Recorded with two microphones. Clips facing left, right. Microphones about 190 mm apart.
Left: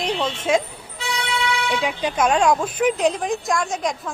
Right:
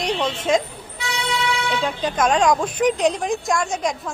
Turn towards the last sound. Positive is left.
turn(degrees=0)  # may be behind; listen again after turning